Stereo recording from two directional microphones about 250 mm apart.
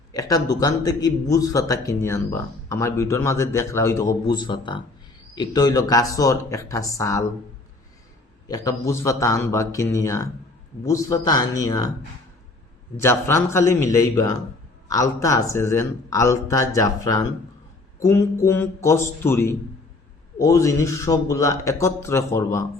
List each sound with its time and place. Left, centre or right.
0.1 s a man's voice: centre
8.4 s a man's voice: centre
13.0 s a man's voice: centre